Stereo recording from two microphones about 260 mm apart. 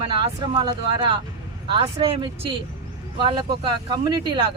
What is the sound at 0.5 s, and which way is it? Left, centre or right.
Speech, centre.